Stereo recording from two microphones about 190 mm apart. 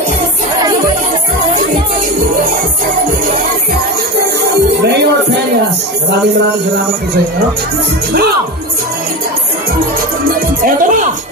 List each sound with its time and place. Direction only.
4.8 s music: 60° right (ahead or behind)
10.6 s speech: 45° right (ahead or behind)